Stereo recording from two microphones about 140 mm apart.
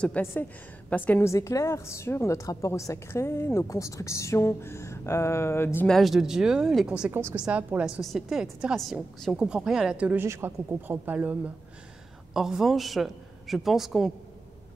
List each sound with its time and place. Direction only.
0.0 s a woman's voice: 10° left (ahead or behind)
5.9 s a woman's voice: centre (ahead or behind)
7.1 s a woman's voice: 15° right (ahead or behind)